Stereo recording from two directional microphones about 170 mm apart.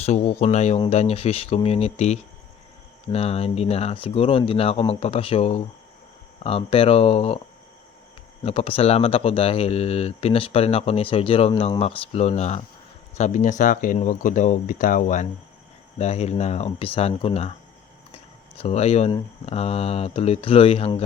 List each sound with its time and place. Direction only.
0.0 s speech: 40° left (ahead or behind)
8.4 s speech: 35° left (ahead or behind)